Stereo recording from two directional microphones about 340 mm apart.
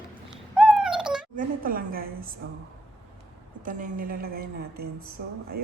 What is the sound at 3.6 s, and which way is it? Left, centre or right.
A woman's voice, right.